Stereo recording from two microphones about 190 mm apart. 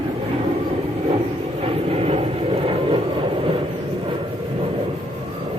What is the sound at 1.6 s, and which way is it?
Vehicle, 30° right (ahead or behind).